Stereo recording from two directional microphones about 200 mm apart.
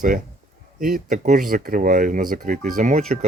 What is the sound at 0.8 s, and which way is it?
Speech, 45° right (ahead or behind).